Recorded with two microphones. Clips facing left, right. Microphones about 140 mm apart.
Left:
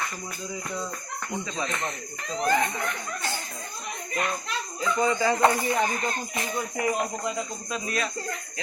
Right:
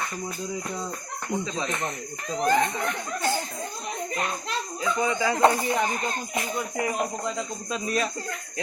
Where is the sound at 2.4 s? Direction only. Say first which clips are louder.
Right 2 dB; 15° right (ahead or behind).